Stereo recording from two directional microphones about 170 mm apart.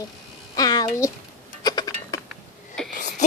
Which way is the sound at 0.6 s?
20° left (ahead or behind).